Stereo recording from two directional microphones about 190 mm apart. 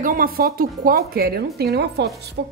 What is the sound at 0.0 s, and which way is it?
A woman's voice, 45° right (ahead or behind).